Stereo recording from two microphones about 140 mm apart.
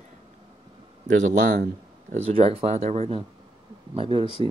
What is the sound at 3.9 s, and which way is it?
Speech, 35° right (ahead or behind).